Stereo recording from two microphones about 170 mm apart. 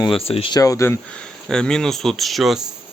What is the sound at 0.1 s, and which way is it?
Speech, 35° left (ahead or behind).